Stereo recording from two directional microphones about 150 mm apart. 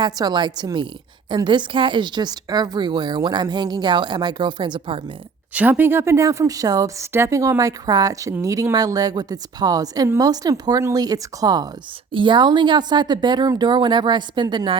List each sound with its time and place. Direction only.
0.0 s speech: 30° right (ahead or behind)
5.5 s speech: 10° right (ahead or behind); by 14.8 s 30° right (ahead or behind)